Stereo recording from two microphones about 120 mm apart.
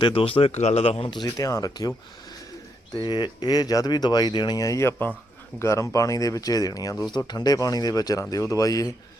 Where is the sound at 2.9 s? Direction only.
40° left (ahead or behind).